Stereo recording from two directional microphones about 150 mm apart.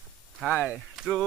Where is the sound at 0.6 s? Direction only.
Centre (ahead or behind).